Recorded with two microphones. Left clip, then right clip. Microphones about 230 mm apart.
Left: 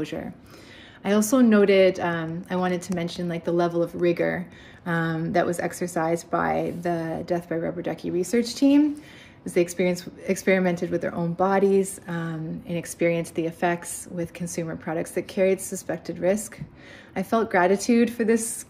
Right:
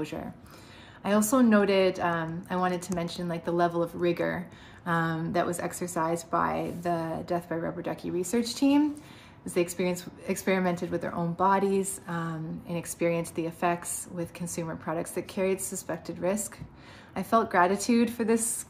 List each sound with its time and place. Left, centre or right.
0.0 s speech: centre
1.3 s speech: centre
13.2 s speech: left
13.5 s speech: centre